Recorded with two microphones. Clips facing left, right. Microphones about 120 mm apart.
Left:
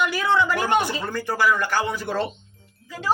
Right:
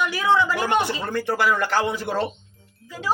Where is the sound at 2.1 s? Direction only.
15° right (ahead or behind).